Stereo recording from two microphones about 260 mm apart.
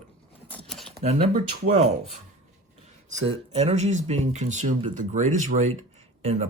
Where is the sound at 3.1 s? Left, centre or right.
Right.